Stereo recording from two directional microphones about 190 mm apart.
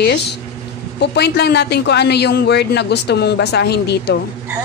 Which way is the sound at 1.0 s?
65° left (ahead or behind).